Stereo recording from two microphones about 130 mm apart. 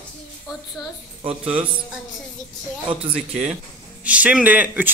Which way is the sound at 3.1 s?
60° right (ahead or behind).